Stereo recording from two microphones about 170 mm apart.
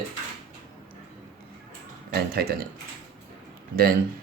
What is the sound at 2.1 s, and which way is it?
Speech, 65° right (ahead or behind).